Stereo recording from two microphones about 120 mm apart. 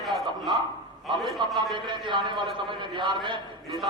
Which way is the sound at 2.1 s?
40° right (ahead or behind).